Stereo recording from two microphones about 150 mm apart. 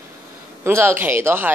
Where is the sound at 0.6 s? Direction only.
15° right (ahead or behind).